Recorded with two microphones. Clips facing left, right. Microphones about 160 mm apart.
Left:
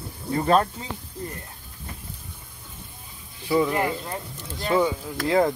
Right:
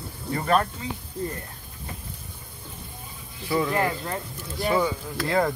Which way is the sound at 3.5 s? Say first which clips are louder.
Left 2 dB; 15° left (ahead or behind).